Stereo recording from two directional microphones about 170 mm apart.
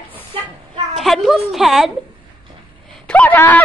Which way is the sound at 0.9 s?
Centre (ahead or behind).